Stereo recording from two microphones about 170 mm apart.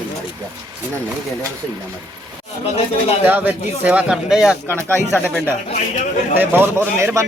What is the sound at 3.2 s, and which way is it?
Speech, 10° right (ahead or behind).